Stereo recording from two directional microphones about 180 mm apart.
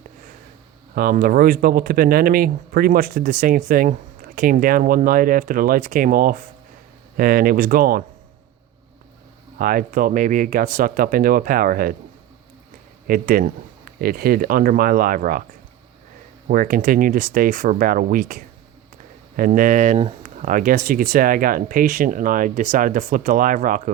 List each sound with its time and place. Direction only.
0.9 s speech: 55° right (ahead or behind)
9.6 s speech: 50° right (ahead or behind)
13.1 s speech: 55° right (ahead or behind)
16.5 s speech: 50° right (ahead or behind)
20.4 s speech: 50° right (ahead or behind)